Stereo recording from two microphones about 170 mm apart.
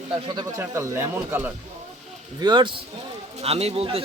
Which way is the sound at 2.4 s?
25° right (ahead or behind).